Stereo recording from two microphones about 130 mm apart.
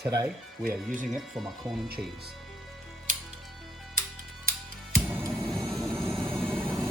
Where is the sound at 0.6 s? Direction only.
85° right.